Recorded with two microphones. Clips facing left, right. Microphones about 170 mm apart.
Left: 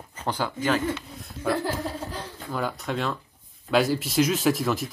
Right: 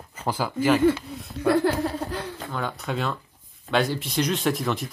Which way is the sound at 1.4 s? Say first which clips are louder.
Right 5 dB; 65° right (ahead or behind).